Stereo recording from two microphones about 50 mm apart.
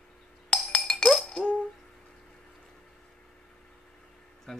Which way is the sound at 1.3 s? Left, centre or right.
Centre.